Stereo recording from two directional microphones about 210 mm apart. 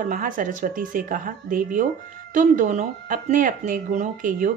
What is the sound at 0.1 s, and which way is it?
Speech, 40° right (ahead or behind).